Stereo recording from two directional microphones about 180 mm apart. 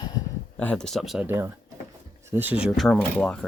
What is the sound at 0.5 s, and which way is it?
Speech, 10° left (ahead or behind).